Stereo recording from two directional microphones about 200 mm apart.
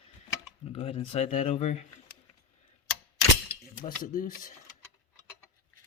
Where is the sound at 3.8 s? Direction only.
40° left (ahead or behind).